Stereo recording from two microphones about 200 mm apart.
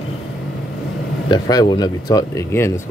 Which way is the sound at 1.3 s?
20° left (ahead or behind).